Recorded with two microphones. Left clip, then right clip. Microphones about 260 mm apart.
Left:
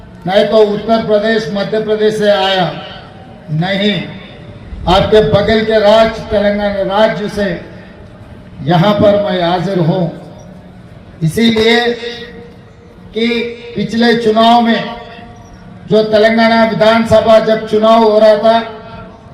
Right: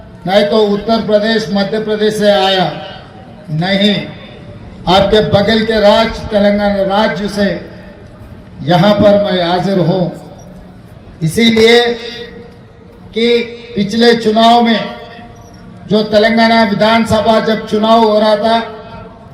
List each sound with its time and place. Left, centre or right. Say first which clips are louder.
0.3 s a man's voice: left 1 dB; right
8.6 s a man's voice: right 1 dB; right
11.2 s a man's voice: right 2 dB; right
13.1 s a man's voice: right 4 dB; right
13.5 s a sound: left 2 dB; centre
13.7 s a man's voice: right 2 dB; right
15.9 s a man's voice: left 1 dB; right